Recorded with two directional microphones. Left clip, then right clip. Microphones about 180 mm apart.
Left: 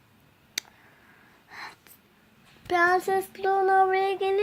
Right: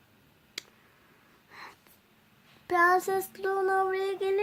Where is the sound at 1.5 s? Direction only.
20° left (ahead or behind).